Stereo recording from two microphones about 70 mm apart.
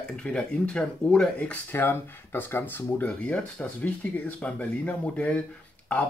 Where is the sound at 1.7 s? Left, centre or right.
Left.